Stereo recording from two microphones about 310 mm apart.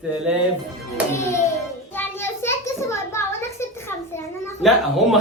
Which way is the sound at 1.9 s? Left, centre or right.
Centre.